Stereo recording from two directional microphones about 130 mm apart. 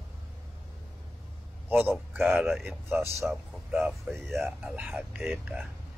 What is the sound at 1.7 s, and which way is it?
Speech, 15° right (ahead or behind).